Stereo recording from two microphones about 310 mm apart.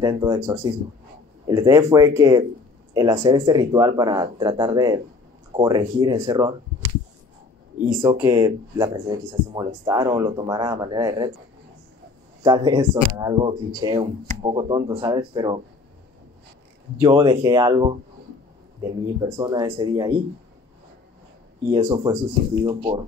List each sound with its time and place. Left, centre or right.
0.0 s speech: centre
8.0 s speech: centre
12.4 s speech: centre
17.0 s speech: centre
21.6 s speech: centre